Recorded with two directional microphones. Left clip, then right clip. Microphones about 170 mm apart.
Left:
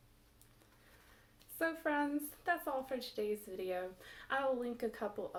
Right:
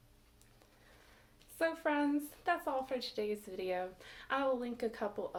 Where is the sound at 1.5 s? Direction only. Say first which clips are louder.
Right 2 dB; 20° right (ahead or behind).